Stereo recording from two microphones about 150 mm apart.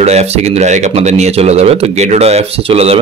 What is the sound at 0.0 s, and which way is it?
A man's voice, 45° right (ahead or behind).